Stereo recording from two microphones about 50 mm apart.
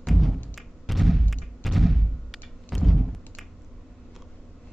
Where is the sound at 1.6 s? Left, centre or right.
Centre.